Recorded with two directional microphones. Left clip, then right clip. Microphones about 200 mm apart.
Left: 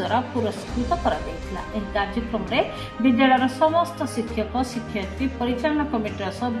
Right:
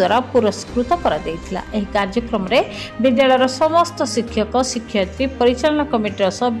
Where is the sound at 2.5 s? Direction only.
50° right (ahead or behind).